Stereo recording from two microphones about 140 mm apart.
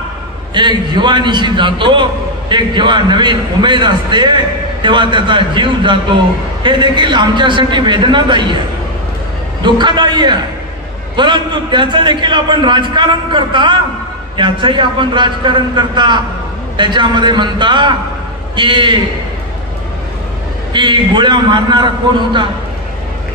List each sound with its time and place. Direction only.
0.6 s a man's voice: 35° right (ahead or behind)
9.6 s a man's voice: 35° right (ahead or behind)
20.7 s a man's voice: 35° right (ahead or behind)